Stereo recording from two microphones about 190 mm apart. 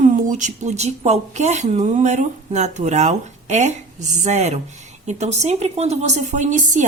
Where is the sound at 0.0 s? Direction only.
40° right (ahead or behind).